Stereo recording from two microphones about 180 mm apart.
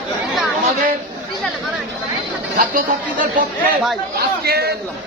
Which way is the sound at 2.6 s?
50° right (ahead or behind).